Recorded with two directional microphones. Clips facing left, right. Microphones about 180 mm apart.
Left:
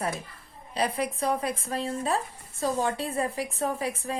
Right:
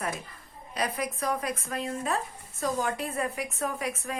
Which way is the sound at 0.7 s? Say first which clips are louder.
Left 3 dB; 30° left (ahead or behind).